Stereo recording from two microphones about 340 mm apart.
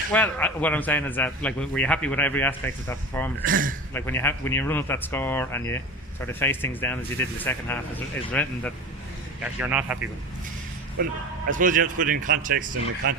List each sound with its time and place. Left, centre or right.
0.1 s a man's voice: centre
3.4 s speech: right
3.9 s a man's voice: centre
11.0 s speech: right